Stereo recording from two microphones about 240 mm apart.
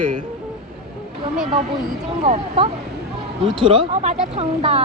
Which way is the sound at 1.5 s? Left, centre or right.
Right.